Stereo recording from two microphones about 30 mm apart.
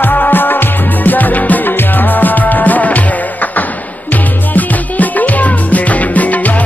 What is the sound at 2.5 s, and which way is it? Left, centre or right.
Music, left.